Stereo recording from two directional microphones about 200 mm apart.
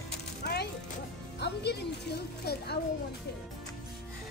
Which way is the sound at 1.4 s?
55° left (ahead or behind).